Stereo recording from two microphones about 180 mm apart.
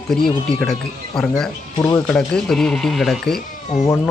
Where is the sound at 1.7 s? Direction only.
20° left (ahead or behind).